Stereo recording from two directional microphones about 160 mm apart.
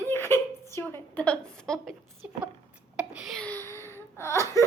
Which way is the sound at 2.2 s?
10° right (ahead or behind).